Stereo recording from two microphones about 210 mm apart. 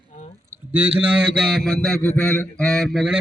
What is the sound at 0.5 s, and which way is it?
A man's voice, 10° right (ahead or behind).